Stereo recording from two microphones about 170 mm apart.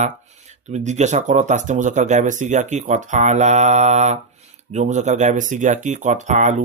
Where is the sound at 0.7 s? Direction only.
40° right (ahead or behind).